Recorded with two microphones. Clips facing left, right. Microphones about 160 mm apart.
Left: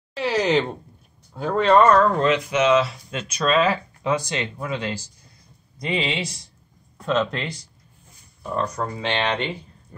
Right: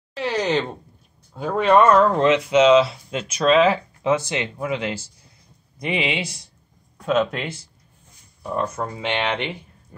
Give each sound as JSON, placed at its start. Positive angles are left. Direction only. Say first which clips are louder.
{"t": 0.1, "sound": "speech", "louder": "left 2 dB", "side_deg": 5}
{"t": 1.3, "sound": "speech", "louder": "even", "side_deg": -5}
{"t": 2.0, "sound": "speech", "louder": "right 2 dB", "side_deg": -20}
{"t": 2.8, "sound": "speech", "louder": "right 4 dB", "side_deg": -10}
{"t": 7.1, "sound": "speech", "louder": "right 2 dB", "side_deg": -5}
{"t": 8.5, "sound": "speech", "louder": "even", "side_deg": -20}